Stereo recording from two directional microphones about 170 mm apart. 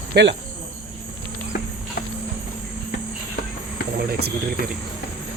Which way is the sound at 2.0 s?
60° left (ahead or behind).